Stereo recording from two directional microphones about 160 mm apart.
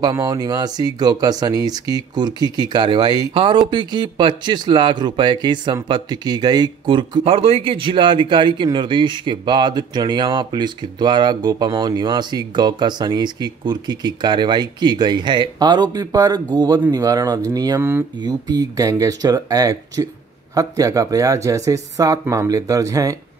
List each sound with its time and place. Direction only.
0.0 s speech: 25° right (ahead or behind)